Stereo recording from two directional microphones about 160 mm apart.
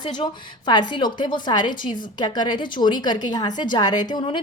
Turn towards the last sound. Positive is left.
turn(degrees=30)  # may be behind; listen again after turning